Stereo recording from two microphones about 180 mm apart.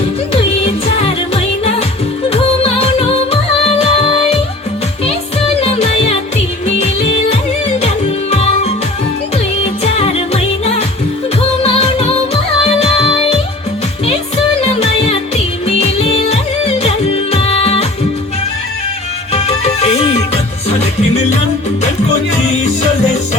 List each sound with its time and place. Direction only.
0.6 s music: 30° left (ahead or behind)
5.5 s music: 35° left (ahead or behind)
8.3 s music: 35° left (ahead or behind)
9.8 s music: 35° left (ahead or behind)
14.8 s music: 35° left (ahead or behind)
19.3 s music: 35° left (ahead or behind)